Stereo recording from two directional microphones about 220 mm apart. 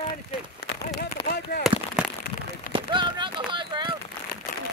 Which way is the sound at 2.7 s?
20° right (ahead or behind).